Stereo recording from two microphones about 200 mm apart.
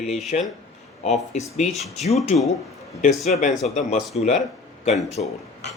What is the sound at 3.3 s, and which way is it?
Speech, 40° left (ahead or behind).